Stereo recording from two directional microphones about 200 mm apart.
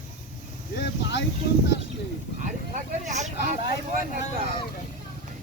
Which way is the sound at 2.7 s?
35° right (ahead or behind).